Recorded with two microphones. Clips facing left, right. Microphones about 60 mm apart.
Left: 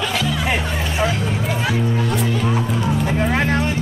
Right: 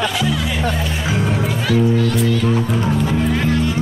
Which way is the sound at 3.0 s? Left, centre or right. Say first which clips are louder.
Right 1 dB; left.